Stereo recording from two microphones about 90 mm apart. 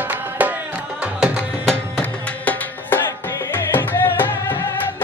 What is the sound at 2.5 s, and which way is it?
Music, 20° left (ahead or behind).